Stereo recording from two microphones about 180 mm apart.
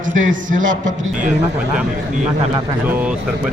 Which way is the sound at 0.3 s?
45° right (ahead or behind).